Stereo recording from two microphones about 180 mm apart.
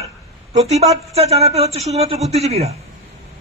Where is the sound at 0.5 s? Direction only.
35° right (ahead or behind).